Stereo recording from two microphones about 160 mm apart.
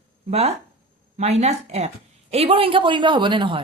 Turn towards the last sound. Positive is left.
turn(degrees=-30)  # may be behind; listen again after turning